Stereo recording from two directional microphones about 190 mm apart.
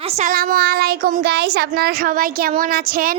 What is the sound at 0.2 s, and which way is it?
Speech, 45° right (ahead or behind).